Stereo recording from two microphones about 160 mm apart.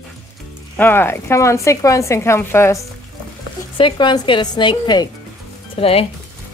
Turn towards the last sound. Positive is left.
turn(degrees=35)  # may be behind; listen again after turning